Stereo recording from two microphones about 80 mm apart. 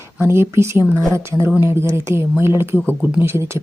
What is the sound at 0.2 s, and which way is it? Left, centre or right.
Speech, right.